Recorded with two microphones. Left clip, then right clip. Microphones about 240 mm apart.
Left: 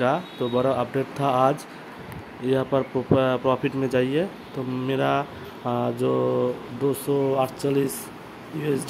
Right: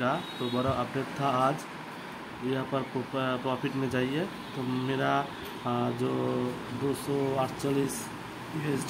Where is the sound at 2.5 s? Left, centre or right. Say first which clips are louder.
Left 10 dB; left.